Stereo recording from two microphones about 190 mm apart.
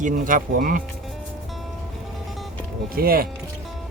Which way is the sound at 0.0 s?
45° right (ahead or behind).